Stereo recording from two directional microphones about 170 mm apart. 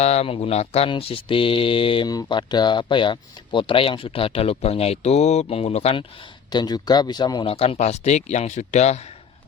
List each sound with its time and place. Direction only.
0.0 s speech: 40° left (ahead or behind)